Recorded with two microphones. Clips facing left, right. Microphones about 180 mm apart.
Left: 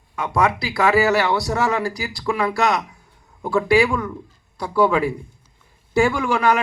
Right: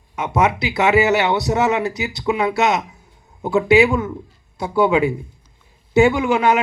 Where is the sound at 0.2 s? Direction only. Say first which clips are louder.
Right 2 dB; 20° right (ahead or behind).